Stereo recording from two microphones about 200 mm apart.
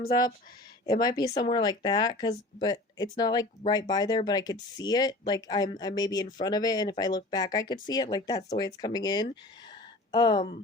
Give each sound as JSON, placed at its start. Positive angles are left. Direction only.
{"t": 0.9, "sound": "speech", "side_deg": 20}